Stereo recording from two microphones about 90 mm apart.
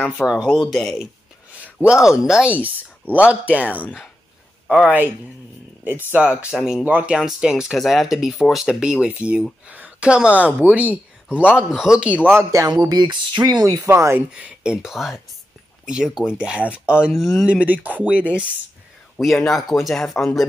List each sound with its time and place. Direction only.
0.5 s speech: centre (ahead or behind)
1.6 s speech: 15° right (ahead or behind)
2.6 s speech: 15° right (ahead or behind)
6.1 s speech: 15° right (ahead or behind)
6.8 s speech: 20° right (ahead or behind)
7.2 s speech: 5° right (ahead or behind)
12.3 s speech: 25° right (ahead or behind)
12.9 s speech: 55° right (ahead or behind)
13.8 s speech: 30° right (ahead or behind)
14.3 s speech: 10° right (ahead or behind)
17.1 s speech: centre (ahead or behind)
17.5 s speech: 15° right (ahead or behind)
19.1 s speech: centre (ahead or behind)